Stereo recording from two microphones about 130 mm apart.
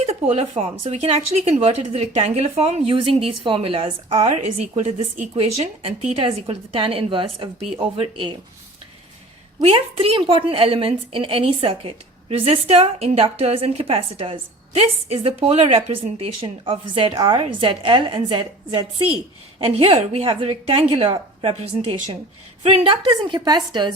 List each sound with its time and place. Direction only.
0.0 s speech: 55° right (ahead or behind)
4.3 s a woman's voice: 60° right (ahead or behind); by 8.3 s 45° right (ahead or behind)
9.6 s a woman's voice: 50° right (ahead or behind); by 23.9 s 35° right (ahead or behind)